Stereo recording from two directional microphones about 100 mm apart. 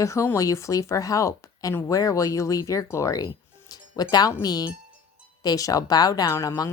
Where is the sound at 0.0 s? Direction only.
30° left (ahead or behind).